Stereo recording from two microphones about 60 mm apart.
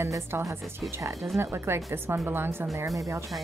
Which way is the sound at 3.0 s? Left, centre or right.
Right.